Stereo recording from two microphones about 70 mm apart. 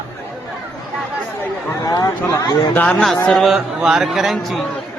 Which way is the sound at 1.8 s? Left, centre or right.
Left.